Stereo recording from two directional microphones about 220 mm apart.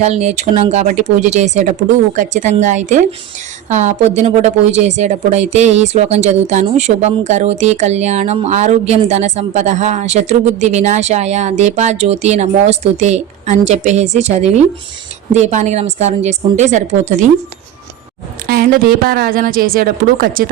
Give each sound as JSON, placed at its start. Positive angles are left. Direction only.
{"t": 0.0, "sound": "speech", "side_deg": -30}
{"t": 18.4, "sound": "speech", "side_deg": -40}